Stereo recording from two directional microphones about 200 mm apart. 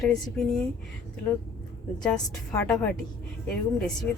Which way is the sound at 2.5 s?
15° left (ahead or behind).